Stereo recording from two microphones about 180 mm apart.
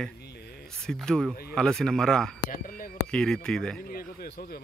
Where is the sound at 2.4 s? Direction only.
50° left (ahead or behind).